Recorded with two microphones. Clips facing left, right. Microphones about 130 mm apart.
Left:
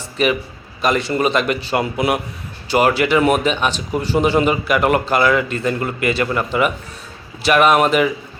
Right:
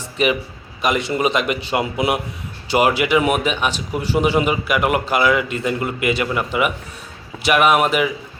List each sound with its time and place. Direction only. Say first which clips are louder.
0.2 s a man's voice: left 1 dB; 20° right (ahead or behind)